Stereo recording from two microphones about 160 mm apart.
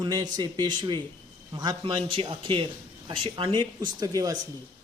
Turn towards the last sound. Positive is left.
turn(degrees=-25)  # may be behind; listen again after turning